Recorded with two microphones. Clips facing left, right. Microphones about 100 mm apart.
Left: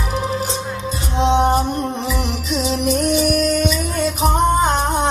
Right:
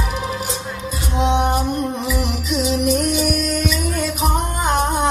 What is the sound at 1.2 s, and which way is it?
Music, 30° left (ahead or behind).